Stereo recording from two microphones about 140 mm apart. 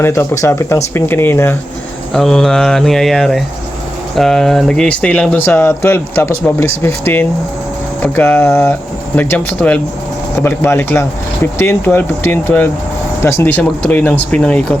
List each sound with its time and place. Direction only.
0.0 s speech: 20° left (ahead or behind)
2.1 s speech: 5° left (ahead or behind)